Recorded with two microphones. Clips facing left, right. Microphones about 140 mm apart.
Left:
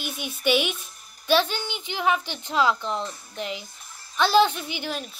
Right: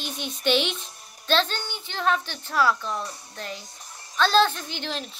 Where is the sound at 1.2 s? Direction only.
10° left (ahead or behind).